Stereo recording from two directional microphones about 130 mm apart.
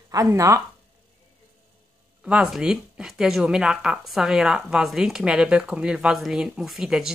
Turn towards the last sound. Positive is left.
turn(degrees=-5)  # may be behind; listen again after turning